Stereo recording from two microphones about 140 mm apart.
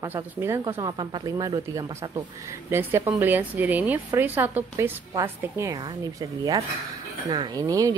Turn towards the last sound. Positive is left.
turn(degrees=-25)  # may be behind; listen again after turning